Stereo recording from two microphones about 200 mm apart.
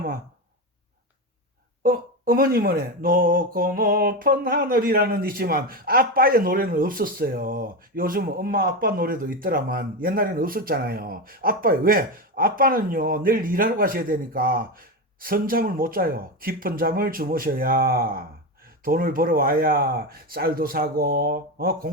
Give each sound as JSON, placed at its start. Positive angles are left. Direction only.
{"t": 1.8, "sound": "speech", "side_deg": -45}